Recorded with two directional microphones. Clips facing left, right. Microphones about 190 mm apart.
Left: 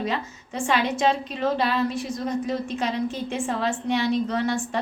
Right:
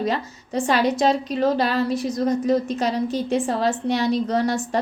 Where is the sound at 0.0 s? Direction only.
40° right (ahead or behind).